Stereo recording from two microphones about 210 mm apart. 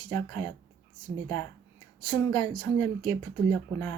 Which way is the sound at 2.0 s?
20° left (ahead or behind).